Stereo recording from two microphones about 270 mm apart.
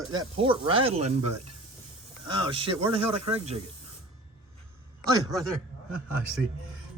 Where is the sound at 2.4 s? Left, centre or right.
Centre.